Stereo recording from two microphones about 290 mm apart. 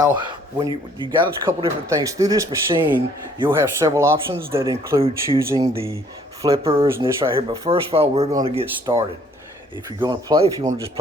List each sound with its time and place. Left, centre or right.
1.2 s a man's voice: centre